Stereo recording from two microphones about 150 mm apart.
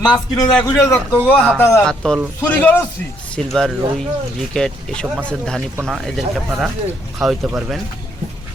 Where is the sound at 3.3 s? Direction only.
5° left (ahead or behind).